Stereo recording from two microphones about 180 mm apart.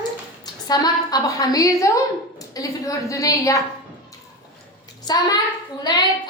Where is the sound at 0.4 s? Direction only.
20° left (ahead or behind).